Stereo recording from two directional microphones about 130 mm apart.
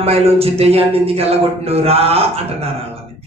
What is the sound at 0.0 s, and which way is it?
A man's voice, 50° right (ahead or behind).